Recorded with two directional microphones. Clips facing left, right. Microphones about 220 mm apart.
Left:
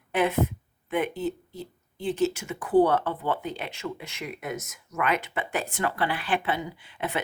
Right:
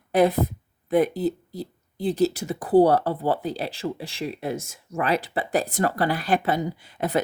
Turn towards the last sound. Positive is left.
turn(degrees=-40)  # may be behind; listen again after turning